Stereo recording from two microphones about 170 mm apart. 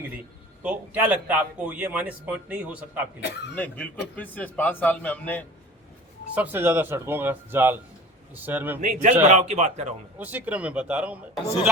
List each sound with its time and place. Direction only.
0.6 s a man's voice: 10° right (ahead or behind)
3.5 s a man's voice: 10° left (ahead or behind)
6.3 s a man's voice: 10° right (ahead or behind)
8.8 s speech: 45° right (ahead or behind)
10.2 s a man's voice: 10° right (ahead or behind)